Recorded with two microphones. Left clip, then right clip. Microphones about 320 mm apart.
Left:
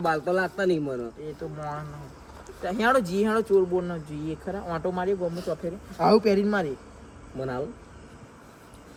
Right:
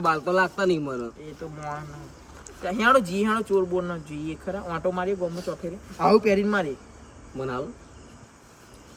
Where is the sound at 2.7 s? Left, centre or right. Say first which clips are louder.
Right 3 dB; centre.